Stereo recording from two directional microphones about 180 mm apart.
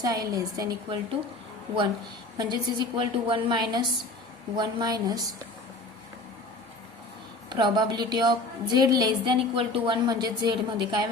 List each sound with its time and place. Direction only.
0.0 s a woman's voice: 20° right (ahead or behind)
2.4 s a woman's voice: 25° right (ahead or behind)
7.5 s a woman's voice: 25° right (ahead or behind)